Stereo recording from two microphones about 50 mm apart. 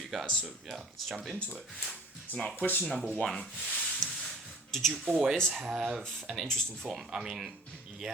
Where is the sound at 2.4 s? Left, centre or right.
Centre.